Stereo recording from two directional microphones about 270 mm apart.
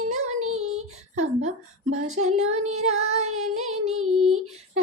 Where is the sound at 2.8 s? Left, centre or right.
Right.